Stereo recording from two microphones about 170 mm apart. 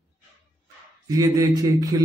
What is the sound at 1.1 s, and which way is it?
Speech, 20° right (ahead or behind).